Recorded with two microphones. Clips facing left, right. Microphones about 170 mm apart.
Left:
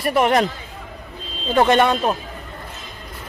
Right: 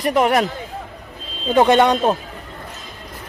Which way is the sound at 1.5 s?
15° right (ahead or behind).